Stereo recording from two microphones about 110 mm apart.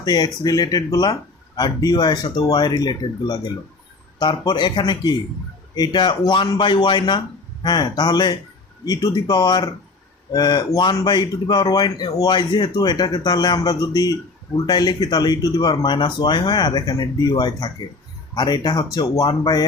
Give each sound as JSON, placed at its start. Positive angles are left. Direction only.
{"t": 0.0, "sound": "speech", "side_deg": 40}